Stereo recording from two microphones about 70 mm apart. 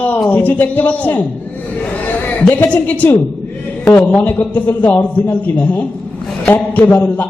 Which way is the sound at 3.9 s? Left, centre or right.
Left.